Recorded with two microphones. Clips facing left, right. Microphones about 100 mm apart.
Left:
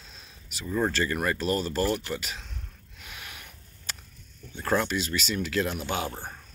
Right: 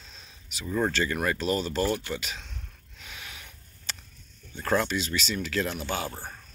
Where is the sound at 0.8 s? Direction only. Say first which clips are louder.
Even; centre (ahead or behind).